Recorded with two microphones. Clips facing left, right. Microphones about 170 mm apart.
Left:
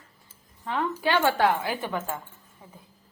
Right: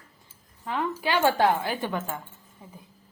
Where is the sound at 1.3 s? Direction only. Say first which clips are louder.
Right 1 dB; 25° right (ahead or behind).